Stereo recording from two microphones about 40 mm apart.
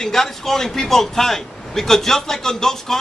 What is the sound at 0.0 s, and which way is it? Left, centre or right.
A man's voice, centre.